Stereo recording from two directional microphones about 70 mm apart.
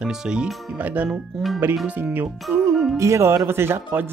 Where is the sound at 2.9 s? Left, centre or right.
Right.